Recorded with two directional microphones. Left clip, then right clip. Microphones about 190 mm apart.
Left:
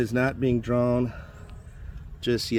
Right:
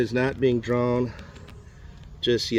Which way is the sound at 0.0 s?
70° left (ahead or behind).